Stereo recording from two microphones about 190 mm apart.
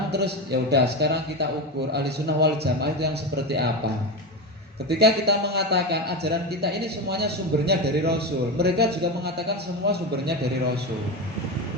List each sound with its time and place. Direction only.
0.7 s a man's voice: 60° right (ahead or behind)
4.9 s a man's voice: 60° right (ahead or behind)